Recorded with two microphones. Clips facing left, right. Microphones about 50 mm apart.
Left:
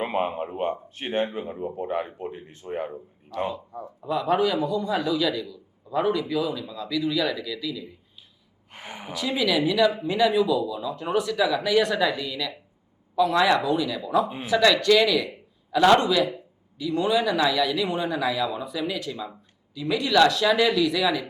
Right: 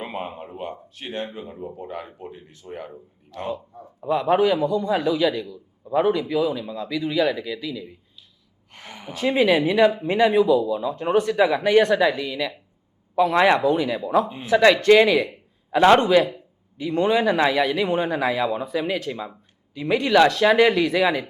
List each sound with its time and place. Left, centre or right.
0.0 s a man's voice: left
4.0 s a man's voice: right
8.7 s a woman's voice: centre
9.1 s speech: right